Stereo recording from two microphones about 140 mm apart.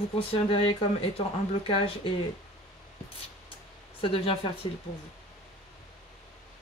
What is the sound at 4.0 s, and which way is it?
Speech, 40° left (ahead or behind).